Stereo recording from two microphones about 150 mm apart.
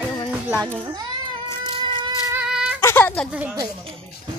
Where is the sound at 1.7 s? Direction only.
35° right (ahead or behind).